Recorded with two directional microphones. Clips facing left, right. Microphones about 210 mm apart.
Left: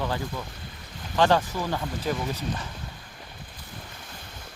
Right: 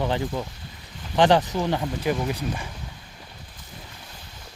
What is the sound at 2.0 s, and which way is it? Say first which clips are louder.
Speech: right 4 dB; 10° right (ahead or behind).